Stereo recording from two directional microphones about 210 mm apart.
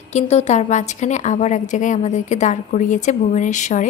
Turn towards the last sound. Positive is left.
turn(degrees=35)  # may be behind; listen again after turning